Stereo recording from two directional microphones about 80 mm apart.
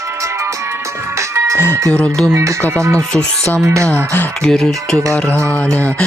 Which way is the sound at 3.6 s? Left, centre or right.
Right.